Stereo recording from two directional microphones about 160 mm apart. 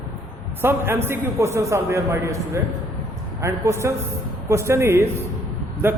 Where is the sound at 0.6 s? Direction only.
15° right (ahead or behind).